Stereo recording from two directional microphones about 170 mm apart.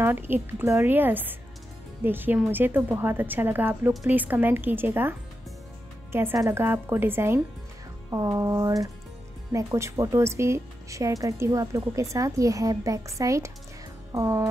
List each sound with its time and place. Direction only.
0.0 s a woman's voice: 15° right (ahead or behind)
6.1 s a woman's voice: 15° right (ahead or behind)